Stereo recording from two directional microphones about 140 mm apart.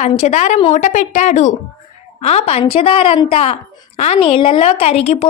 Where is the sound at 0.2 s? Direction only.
55° left (ahead or behind).